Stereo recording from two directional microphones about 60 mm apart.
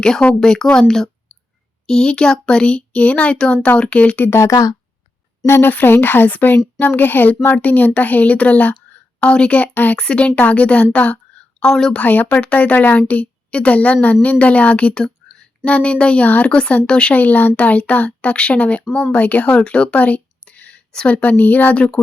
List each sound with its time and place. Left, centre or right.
0.0 s a woman's voice: centre
4.2 s speech: left
4.5 s speech: left
5.5 s a woman's voice: left
10.9 s a sound: left
11.7 s speech: centre
11.9 s a woman's voice: left
17.2 s a woman's voice: left